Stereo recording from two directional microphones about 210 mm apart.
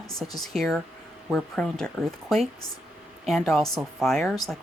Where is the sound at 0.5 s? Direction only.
Centre (ahead or behind).